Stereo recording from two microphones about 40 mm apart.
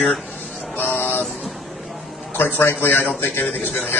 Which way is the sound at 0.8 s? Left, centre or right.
Left.